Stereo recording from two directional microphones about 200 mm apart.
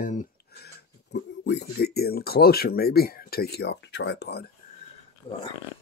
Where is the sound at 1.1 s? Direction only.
55° left (ahead or behind).